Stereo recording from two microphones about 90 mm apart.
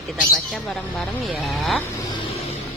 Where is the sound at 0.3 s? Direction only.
5° left (ahead or behind).